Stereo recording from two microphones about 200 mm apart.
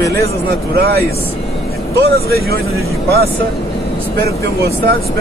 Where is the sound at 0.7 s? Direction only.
50° right (ahead or behind).